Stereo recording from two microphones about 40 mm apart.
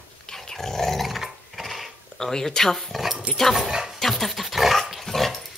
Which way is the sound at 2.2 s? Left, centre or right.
Centre.